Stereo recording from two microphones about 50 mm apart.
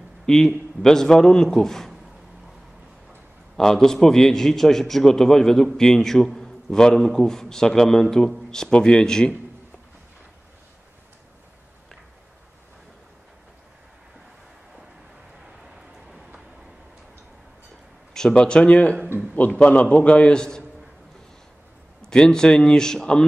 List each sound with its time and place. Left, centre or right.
0.3 s a man's voice: centre
3.5 s a man's voice: centre
18.3 s a man's voice: left
22.1 s a man's voice: centre